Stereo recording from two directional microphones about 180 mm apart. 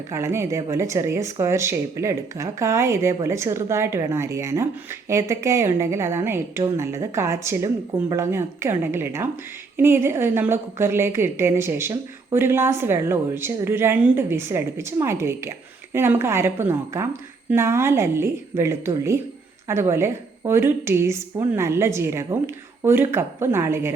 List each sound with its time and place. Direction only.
0.1 s a woman's voice: 15° right (ahead or behind)